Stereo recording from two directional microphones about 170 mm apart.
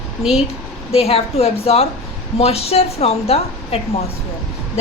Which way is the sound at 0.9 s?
35° left (ahead or behind).